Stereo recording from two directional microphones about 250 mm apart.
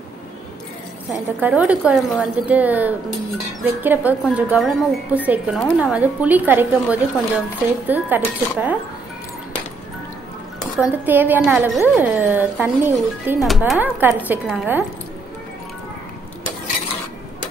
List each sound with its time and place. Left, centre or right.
1.4 s a woman's voice: centre
10.8 s a woman's voice: centre